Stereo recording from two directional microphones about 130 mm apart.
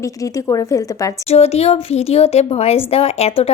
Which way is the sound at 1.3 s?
55° left (ahead or behind).